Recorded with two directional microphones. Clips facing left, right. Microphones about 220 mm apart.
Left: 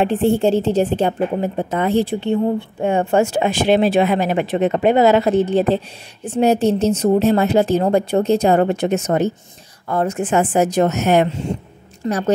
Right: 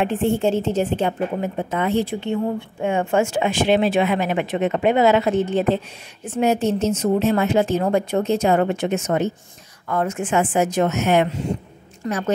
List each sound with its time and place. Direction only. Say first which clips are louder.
0.0 s a woman's voice: left 4 dB; 35° left (ahead or behind)
12.0 s a woman's voice: left 4 dB; 25° left (ahead or behind)